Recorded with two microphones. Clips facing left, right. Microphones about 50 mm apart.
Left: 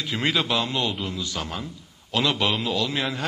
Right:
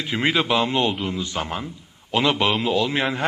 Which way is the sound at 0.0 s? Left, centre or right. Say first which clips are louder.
Right 3 dB; right.